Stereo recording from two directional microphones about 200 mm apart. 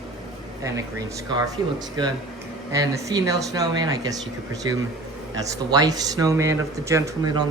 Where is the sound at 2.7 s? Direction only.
15° right (ahead or behind).